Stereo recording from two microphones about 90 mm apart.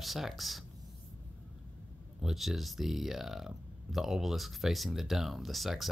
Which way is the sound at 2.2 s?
5° right (ahead or behind).